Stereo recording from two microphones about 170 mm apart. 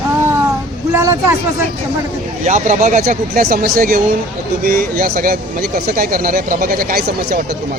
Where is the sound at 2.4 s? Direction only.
45° right (ahead or behind).